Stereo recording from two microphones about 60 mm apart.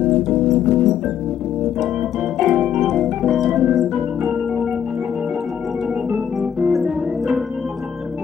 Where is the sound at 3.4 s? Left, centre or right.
Centre.